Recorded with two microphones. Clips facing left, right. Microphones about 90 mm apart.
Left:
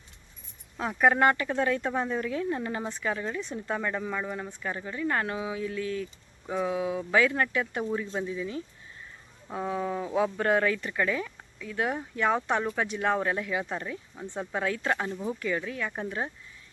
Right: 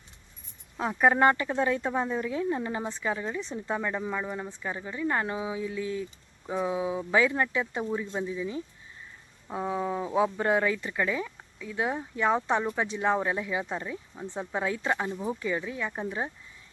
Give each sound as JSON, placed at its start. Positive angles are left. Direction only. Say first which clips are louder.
{"t": 1.0, "sound": "speech", "louder": "even", "side_deg": -20}
{"t": 7.9, "sound": "speech", "louder": "even", "side_deg": -5}
{"t": 8.3, "sound": "speech", "louder": "right 1 dB", "side_deg": -15}
{"t": 14.2, "sound": "speech", "louder": "even", "side_deg": 0}
{"t": 14.5, "sound": "speech", "louder": "even", "side_deg": -20}
{"t": 15.9, "sound": "speech", "louder": "right 1 dB", "side_deg": -5}